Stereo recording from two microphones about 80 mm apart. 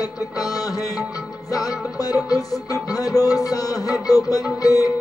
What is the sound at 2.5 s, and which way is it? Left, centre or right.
Music, left.